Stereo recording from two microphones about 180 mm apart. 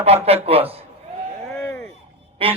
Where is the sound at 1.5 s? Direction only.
5° left (ahead or behind).